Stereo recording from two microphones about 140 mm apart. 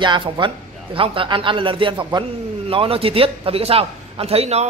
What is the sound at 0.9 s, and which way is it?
A man's voice, 40° right (ahead or behind).